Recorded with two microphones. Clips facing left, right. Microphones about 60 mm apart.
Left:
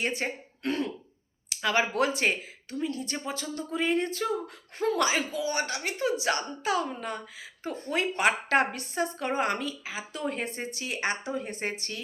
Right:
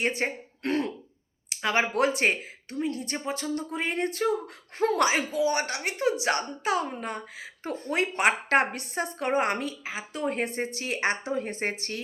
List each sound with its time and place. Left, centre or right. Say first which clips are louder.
0.2 s speech: right 3 dB; right
0.6 s throat clearing: right 2 dB; right
1.5 s a sound: even; right
1.9 s speech: right 2 dB; right
4.8 s speech: right 2 dB; right
5.6 s speech: right 2 dB; right
7.6 s speech: right 1 dB; right